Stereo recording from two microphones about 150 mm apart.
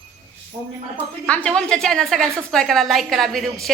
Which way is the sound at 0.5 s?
40° right (ahead or behind).